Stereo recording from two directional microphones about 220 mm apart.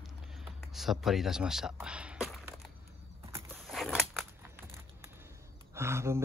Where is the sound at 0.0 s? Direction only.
Centre (ahead or behind).